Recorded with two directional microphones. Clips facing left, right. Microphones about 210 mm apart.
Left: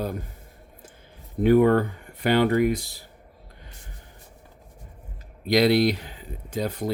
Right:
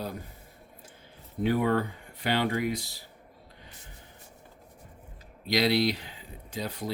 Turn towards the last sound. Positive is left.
turn(degrees=50)  # may be behind; listen again after turning